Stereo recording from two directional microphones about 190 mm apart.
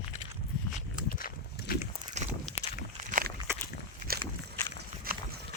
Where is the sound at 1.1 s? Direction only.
50° left (ahead or behind).